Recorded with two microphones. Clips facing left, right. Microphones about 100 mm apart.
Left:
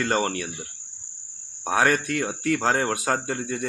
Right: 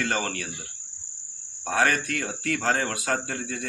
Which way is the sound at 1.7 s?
15° left (ahead or behind).